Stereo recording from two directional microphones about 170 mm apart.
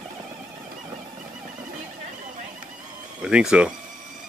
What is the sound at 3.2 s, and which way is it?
Speech, 5° right (ahead or behind).